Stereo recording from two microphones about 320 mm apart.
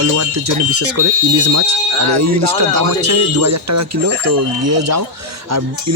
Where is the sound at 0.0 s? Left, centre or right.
Right.